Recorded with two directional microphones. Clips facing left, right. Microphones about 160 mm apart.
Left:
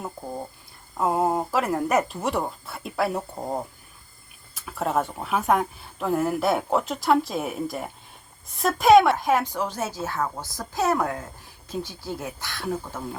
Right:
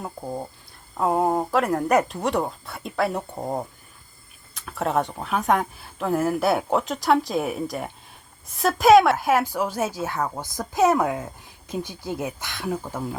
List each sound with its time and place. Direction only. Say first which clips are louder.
0.9 s speech: right 1 dB; centre (ahead or behind); by 13.0 s 20° right (ahead or behind)